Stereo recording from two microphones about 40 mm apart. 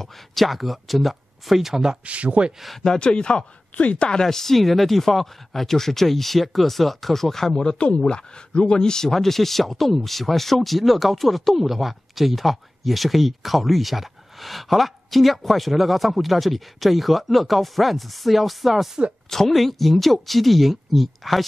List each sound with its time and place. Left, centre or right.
0.0 s speech: centre
2.0 s speech: right
2.8 s speech: centre
3.7 s speech: left
4.1 s speech: centre